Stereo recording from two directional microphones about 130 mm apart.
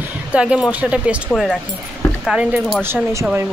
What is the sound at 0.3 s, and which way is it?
Speech, 10° right (ahead or behind).